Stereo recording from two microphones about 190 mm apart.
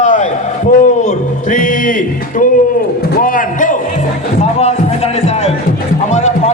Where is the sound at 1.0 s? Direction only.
45° left (ahead or behind).